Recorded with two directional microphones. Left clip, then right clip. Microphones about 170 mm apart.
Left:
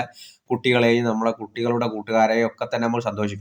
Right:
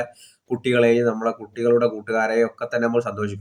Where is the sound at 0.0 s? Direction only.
20° left (ahead or behind).